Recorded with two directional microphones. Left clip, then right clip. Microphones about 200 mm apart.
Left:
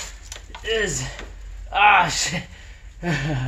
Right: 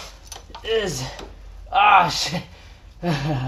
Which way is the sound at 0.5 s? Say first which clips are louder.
Even; 5° left (ahead or behind).